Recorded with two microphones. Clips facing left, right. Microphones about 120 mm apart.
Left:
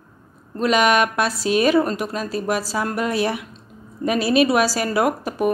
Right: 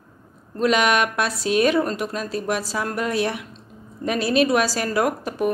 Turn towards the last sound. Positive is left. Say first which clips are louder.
# left 2 dB
turn(degrees=5)  # may be behind; listen again after turning